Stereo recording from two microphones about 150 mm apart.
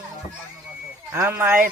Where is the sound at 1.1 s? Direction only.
15° right (ahead or behind).